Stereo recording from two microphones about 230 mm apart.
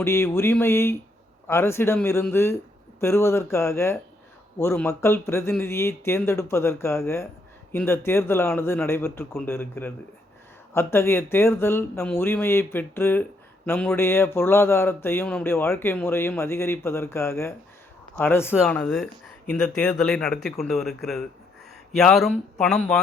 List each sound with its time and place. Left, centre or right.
0.0 s speech: centre